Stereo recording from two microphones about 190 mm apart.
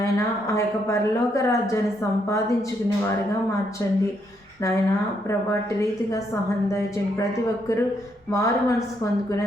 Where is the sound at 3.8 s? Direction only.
15° left (ahead or behind).